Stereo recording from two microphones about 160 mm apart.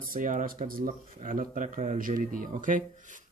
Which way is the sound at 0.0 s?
60° right (ahead or behind).